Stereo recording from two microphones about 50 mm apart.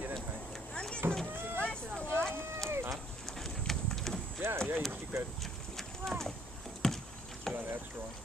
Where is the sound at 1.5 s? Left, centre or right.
Left.